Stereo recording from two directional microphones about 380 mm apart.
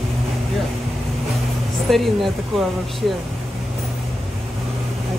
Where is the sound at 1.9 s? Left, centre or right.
Centre.